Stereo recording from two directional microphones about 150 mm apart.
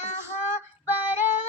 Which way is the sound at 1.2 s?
50° left (ahead or behind).